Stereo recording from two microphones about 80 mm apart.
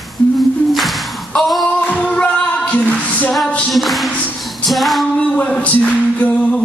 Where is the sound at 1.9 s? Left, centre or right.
Centre.